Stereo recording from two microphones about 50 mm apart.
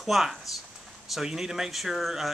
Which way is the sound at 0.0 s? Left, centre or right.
Centre.